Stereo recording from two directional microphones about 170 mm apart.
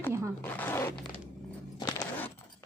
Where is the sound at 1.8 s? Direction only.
25° left (ahead or behind).